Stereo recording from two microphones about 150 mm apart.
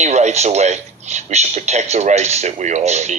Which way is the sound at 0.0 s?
50° right (ahead or behind).